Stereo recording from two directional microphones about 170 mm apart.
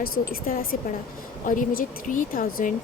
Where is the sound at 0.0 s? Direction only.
60° left (ahead or behind).